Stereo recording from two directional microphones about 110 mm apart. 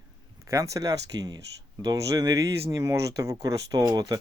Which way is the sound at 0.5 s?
30° right (ahead or behind).